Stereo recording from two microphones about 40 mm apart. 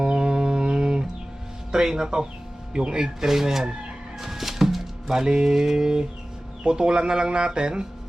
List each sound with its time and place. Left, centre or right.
0.0 s music: right
1.7 s speech: centre
4.2 s music: centre
5.2 s speech: centre